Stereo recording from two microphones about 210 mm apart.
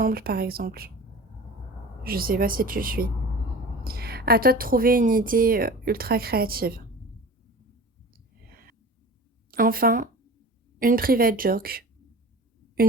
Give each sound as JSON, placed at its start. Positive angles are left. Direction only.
{"t": 0.0, "sound": "a woman's voice", "side_deg": -45}
{"t": 2.0, "sound": "a woman's voice", "side_deg": -45}
{"t": 8.4, "sound": "a sound", "side_deg": -45}
{"t": 9.5, "sound": "a woman's voice", "side_deg": -45}